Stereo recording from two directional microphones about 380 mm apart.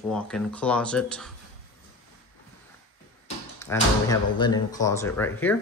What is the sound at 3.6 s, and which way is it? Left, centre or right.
Speech, centre.